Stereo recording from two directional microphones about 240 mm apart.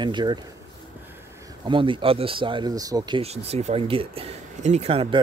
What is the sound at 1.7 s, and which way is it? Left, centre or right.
Speech, right.